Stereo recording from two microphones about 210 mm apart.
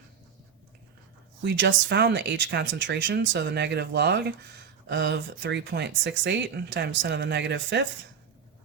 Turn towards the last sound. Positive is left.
turn(degrees=-55)  # may be behind; listen again after turning